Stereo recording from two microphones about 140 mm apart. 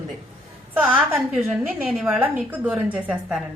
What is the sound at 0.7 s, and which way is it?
A woman's voice, 10° right (ahead or behind).